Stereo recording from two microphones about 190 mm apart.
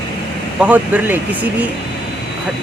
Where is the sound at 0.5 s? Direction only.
5° right (ahead or behind).